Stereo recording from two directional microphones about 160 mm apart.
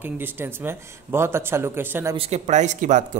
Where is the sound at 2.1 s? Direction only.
45° right (ahead or behind).